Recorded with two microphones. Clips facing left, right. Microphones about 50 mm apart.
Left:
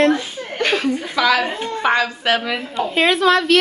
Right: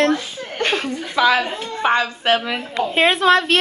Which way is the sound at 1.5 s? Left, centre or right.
Left.